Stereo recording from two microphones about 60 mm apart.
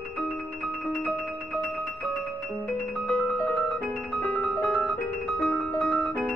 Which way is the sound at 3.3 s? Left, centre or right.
Left.